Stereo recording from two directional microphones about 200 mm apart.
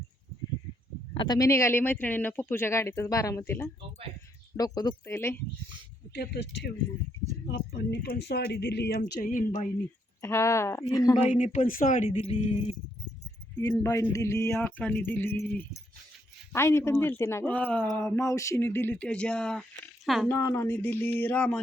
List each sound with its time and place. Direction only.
1.1 s speech: 20° left (ahead or behind)
6.1 s speech: 60° left (ahead or behind); by 9.6 s 40° left (ahead or behind)
10.2 s speech: 15° left (ahead or behind)
11.2 s speech: 35° left (ahead or behind)
13.6 s speech: 15° left (ahead or behind)
20.3 s speech: 10° left (ahead or behind)